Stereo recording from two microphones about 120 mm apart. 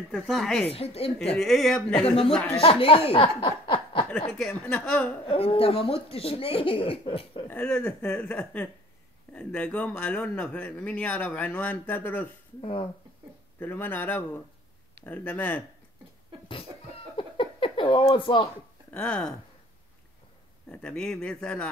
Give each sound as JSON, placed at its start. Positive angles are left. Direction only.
{"t": 0.1, "sound": "speech", "side_deg": 0}
{"t": 0.7, "sound": "speech", "side_deg": 55}
{"t": 1.2, "sound": "speech", "side_deg": 5}
{"t": 2.0, "sound": "speech", "side_deg": 50}
{"t": 2.3, "sound": "speech", "side_deg": 10}
{"t": 2.6, "sound": "speech", "side_deg": 50}
{"t": 4.3, "sound": "speech", "side_deg": 5}
{"t": 5.2, "sound": "speech", "side_deg": 50}
{"t": 7.4, "sound": "speech", "side_deg": 15}
{"t": 13.6, "sound": "speech", "side_deg": 15}
{"t": 17.2, "sound": "a sound", "side_deg": 45}
{"t": 18.9, "sound": "speech", "side_deg": 10}
{"t": 20.7, "sound": "speech", "side_deg": 10}